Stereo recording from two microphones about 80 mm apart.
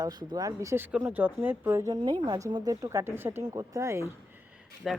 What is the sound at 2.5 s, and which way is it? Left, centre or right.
Speech, right.